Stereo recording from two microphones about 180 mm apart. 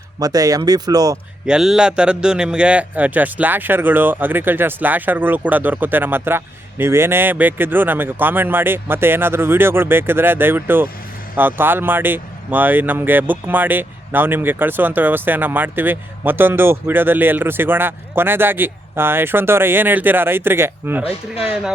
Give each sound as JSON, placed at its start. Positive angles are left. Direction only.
{"t": 0.2, "sound": "speech", "side_deg": -20}
{"t": 1.5, "sound": "speech", "side_deg": -5}